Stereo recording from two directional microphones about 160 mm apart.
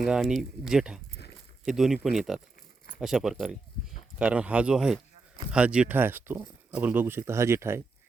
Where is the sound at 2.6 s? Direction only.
60° left (ahead or behind).